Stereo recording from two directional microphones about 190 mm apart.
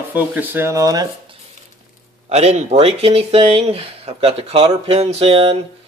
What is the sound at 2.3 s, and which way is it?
Speech, 35° right (ahead or behind).